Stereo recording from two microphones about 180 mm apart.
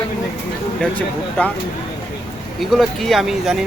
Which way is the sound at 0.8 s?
5° left (ahead or behind).